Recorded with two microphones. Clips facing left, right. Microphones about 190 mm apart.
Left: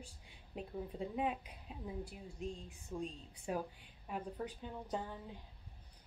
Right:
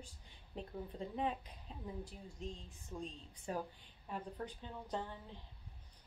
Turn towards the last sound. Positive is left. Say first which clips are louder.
# left 1 dB
turn(degrees=10)  # may be behind; listen again after turning